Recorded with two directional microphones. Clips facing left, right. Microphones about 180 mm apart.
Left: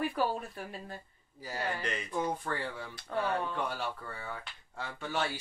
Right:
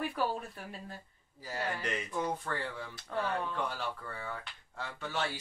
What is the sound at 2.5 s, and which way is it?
Speech, 25° left (ahead or behind).